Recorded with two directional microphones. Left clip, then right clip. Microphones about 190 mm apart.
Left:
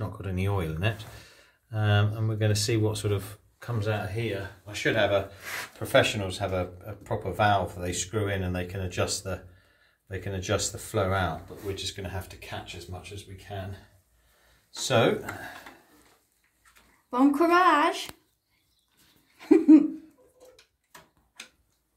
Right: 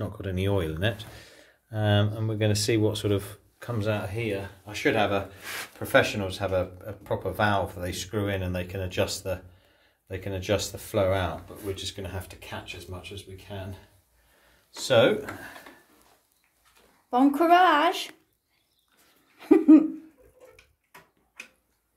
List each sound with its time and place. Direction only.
0.0 s speech: 20° right (ahead or behind)
12.1 s speech: 35° right (ahead or behind)
14.8 s speech: 15° right (ahead or behind)
17.1 s speech: 20° right (ahead or behind)
19.3 s a sound: 10° right (ahead or behind)